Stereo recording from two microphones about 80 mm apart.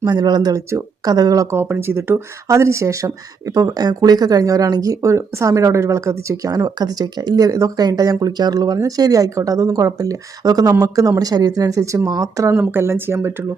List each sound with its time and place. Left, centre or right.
0.0 s speech: right
0.5 s speech: right
1.1 s speech: right
1.5 s speech: right